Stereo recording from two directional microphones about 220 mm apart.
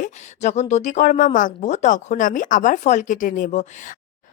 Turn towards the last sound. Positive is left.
turn(degrees=40)  # may be behind; listen again after turning